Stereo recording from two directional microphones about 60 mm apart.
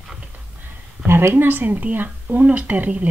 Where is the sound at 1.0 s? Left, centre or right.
Right.